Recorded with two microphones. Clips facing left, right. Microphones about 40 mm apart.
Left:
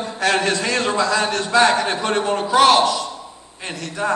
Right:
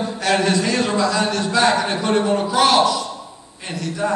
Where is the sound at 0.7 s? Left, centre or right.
Left.